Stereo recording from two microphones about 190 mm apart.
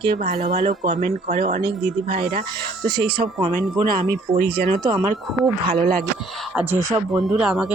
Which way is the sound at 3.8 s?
50° right (ahead or behind).